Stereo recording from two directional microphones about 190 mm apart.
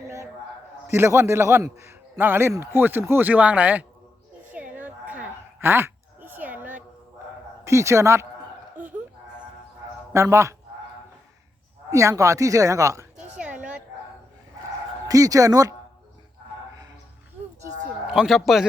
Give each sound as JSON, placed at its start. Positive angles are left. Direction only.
{"t": 0.9, "sound": "a man's voice", "side_deg": -15}
{"t": 4.5, "sound": "a sound", "side_deg": -10}
{"t": 7.6, "sound": "a man's voice", "side_deg": -15}
{"t": 8.7, "sound": "a sound", "side_deg": -10}
{"t": 10.1, "sound": "a man's voice", "side_deg": -15}
{"t": 11.9, "sound": "a man's voice", "side_deg": -15}
{"t": 13.3, "sound": "bow-wow", "side_deg": -5}
{"t": 15.0, "sound": "a man's voice", "side_deg": -20}
{"t": 18.1, "sound": "a man's voice", "side_deg": 0}